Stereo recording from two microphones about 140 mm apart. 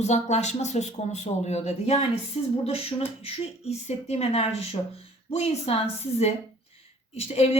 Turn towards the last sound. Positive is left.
turn(degrees=45)  # may be behind; listen again after turning